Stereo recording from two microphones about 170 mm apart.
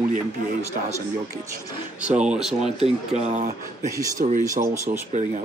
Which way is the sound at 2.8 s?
40° right (ahead or behind).